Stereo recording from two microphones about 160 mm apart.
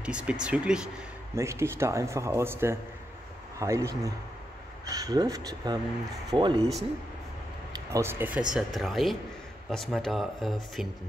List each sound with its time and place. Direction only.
0.0 s speech: 5° right (ahead or behind)
1.3 s speech: 15° right (ahead or behind)
7.7 s speech: 20° right (ahead or behind)
8.5 s speech: centre (ahead or behind)